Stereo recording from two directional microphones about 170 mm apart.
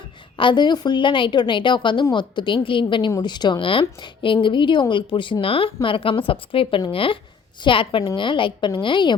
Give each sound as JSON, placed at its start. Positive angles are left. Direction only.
{"t": 0.3, "sound": "speech", "side_deg": 25}